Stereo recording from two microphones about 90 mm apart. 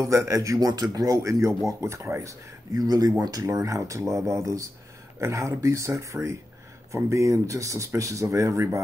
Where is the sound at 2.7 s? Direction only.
45° right (ahead or behind).